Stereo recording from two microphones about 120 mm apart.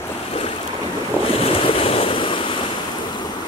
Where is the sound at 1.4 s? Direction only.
50° left (ahead or behind).